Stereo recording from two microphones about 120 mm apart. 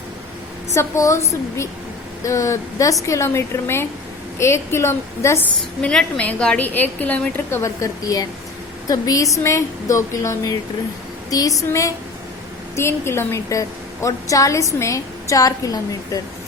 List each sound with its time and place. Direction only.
0.7 s a woman's voice: 25° left (ahead or behind)
5.8 s a woman's voice: 10° left (ahead or behind); by 16.2 s 30° left (ahead or behind)